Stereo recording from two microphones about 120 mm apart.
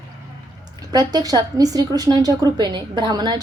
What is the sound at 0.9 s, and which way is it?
A woman's voice, 30° right (ahead or behind).